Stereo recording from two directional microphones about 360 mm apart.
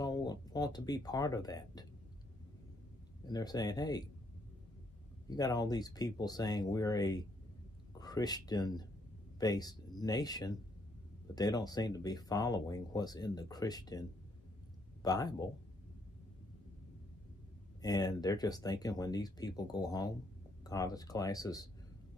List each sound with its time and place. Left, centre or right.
0.0 s speech: centre
3.3 s speech: centre
5.3 s speech: centre
17.8 s speech: centre